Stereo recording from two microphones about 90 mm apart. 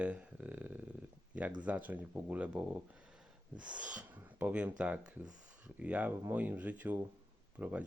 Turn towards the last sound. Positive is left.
turn(degrees=-15)  # may be behind; listen again after turning